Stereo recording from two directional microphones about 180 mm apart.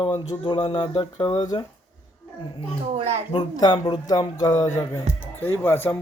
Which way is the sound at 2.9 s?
35° right (ahead or behind).